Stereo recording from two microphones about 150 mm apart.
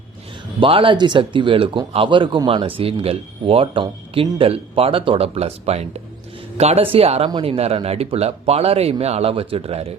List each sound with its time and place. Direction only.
0.6 s speech: 35° right (ahead or behind)